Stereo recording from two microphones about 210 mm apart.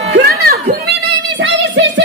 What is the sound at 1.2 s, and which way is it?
Music, 60° right (ahead or behind).